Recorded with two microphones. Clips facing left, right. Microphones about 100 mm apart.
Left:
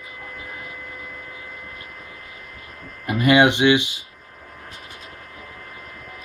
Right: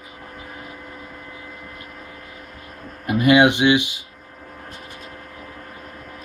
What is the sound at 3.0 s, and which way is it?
Speech, 10° right (ahead or behind).